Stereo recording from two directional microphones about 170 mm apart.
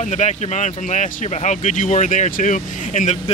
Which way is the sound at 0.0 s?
45° left (ahead or behind).